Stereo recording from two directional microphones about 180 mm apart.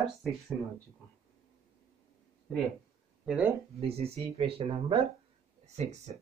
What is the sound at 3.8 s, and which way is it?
Speech, 35° right (ahead or behind).